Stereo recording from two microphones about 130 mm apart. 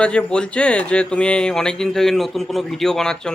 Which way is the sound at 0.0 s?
10° left (ahead or behind).